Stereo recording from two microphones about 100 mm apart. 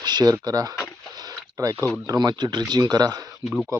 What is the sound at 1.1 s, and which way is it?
Rowboat, 40° right (ahead or behind).